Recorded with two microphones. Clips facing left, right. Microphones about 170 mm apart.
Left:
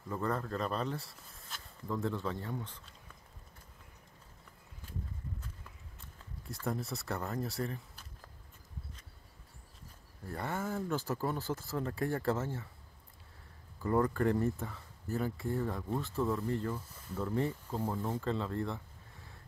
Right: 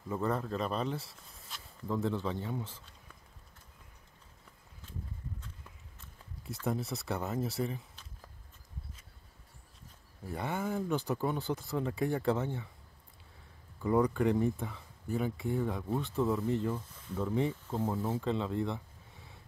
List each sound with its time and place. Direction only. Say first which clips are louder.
0.1 s speech: right 2 dB; 5° right (ahead or behind)
0.6 s speech: right 1 dB; 20° right (ahead or behind)
0.8 s speech: right 2 dB; centre (ahead or behind)
6.5 s speech: right 2 dB; centre (ahead or behind)
10.3 s speech: right 2 dB; centre (ahead or behind)
13.8 s speech: right 2 dB; 10° right (ahead or behind)